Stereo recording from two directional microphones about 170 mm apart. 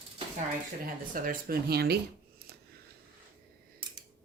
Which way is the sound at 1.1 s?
55° right (ahead or behind).